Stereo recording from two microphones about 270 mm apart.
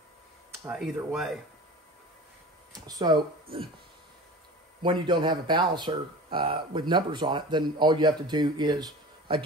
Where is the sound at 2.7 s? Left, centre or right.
Centre.